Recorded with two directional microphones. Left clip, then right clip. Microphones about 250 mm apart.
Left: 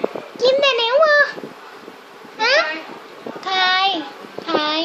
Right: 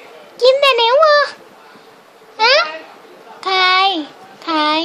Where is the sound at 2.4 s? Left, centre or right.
Right.